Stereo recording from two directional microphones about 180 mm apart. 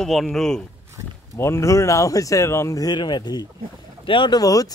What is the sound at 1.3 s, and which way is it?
Speech, 15° left (ahead or behind).